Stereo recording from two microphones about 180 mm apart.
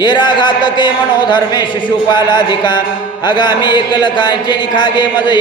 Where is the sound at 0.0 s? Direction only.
25° left (ahead or behind).